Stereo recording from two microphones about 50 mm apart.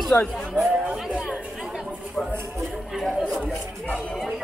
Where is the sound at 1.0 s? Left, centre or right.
Right.